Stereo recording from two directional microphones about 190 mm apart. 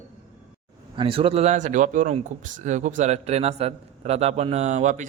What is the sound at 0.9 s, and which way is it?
Speech, 30° right (ahead or behind).